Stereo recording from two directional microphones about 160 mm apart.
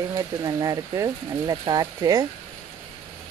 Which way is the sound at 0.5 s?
20° right (ahead or behind).